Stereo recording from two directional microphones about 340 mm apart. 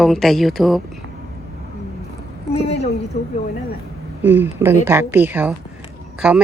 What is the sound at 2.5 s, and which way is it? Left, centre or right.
Speech, centre.